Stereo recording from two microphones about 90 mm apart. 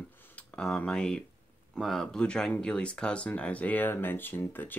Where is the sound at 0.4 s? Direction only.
10° left (ahead or behind).